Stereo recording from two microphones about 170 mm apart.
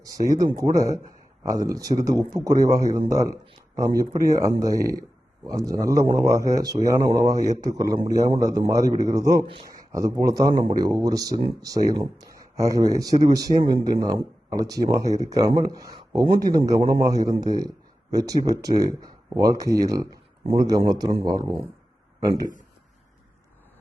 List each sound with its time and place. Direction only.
0.0 s speech: 20° right (ahead or behind)